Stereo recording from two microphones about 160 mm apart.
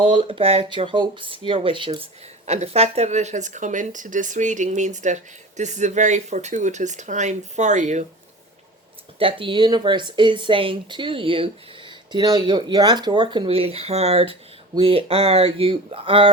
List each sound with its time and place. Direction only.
0.0 s speech: 35° right (ahead or behind)
2.5 s speech: 40° right (ahead or behind)
9.1 s speech: 35° right (ahead or behind)